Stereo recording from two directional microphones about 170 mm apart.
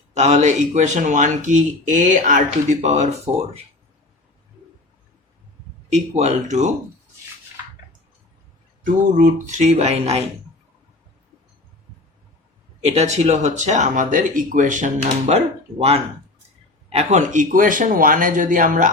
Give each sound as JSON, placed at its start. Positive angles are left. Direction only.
{"t": 0.1, "sound": "speech", "side_deg": -40}
{"t": 5.9, "sound": "speech", "side_deg": -40}
{"t": 8.8, "sound": "speech", "side_deg": -50}
{"t": 12.9, "sound": "speech", "side_deg": -40}
{"t": 16.9, "sound": "speech", "side_deg": -40}